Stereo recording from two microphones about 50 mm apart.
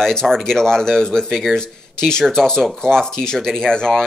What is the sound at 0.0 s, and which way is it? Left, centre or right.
Speech, centre.